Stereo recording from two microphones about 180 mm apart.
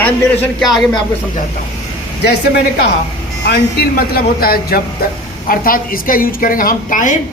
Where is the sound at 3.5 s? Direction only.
60° left (ahead or behind).